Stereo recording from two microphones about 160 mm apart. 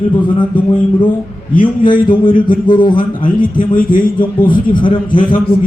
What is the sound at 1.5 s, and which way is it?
A man's voice, 60° left (ahead or behind).